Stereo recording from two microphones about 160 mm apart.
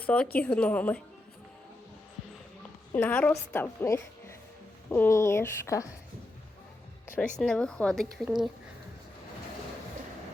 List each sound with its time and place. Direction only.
0.0 s a woman's voice: 10° left (ahead or behind)
2.9 s a woman's voice: 10° left (ahead or behind)
7.3 s speech: 5° left (ahead or behind)